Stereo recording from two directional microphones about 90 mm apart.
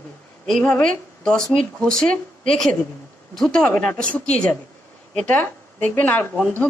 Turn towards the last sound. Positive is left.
turn(degrees=20)  # may be behind; listen again after turning